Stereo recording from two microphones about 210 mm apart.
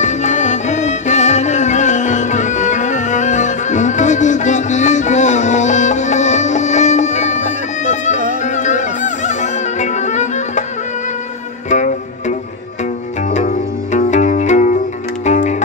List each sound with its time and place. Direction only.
0.0 s music: 35° left (ahead or behind)
11.7 s music: 35° left (ahead or behind)
13.9 s music: 35° left (ahead or behind)